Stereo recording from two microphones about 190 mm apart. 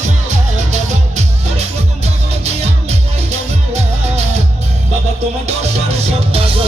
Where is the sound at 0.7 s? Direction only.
35° right (ahead or behind).